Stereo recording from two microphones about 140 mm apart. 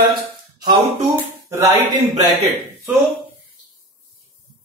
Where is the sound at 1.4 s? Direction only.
20° right (ahead or behind).